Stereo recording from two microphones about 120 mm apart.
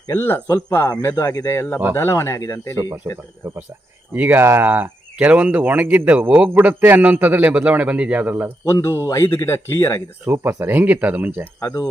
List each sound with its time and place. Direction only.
0.1 s speech: 20° left (ahead or behind)
1.1 s speech: 30° left (ahead or behind)
3.4 s speech: 20° right (ahead or behind)
8.6 s speech: 25° left (ahead or behind)
10.2 s speech: 15° right (ahead or behind)
11.6 s speech: 30° left (ahead or behind)